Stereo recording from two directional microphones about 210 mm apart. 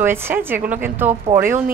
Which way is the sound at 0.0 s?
10° right (ahead or behind).